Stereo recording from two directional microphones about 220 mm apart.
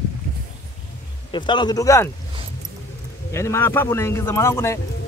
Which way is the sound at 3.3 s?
10° left (ahead or behind).